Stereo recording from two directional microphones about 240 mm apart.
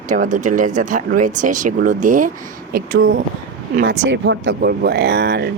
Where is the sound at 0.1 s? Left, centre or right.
Right.